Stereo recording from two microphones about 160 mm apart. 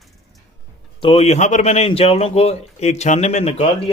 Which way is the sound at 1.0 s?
35° left (ahead or behind).